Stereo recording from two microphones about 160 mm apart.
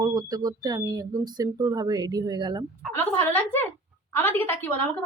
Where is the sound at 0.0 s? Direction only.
25° right (ahead or behind).